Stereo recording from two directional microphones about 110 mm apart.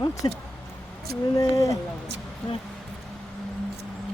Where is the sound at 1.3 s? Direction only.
30° left (ahead or behind).